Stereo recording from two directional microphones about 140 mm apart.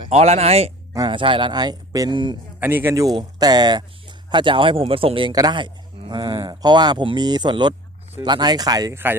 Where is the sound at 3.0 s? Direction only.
30° right (ahead or behind).